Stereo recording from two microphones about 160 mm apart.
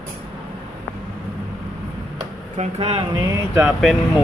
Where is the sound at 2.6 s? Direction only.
40° right (ahead or behind); by 3.7 s 20° right (ahead or behind).